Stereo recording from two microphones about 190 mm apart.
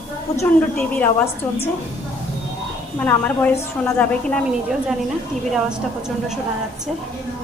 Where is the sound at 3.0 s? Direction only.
5° left (ahead or behind).